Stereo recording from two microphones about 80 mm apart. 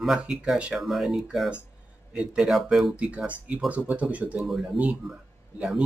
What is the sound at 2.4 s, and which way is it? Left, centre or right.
Speech, centre.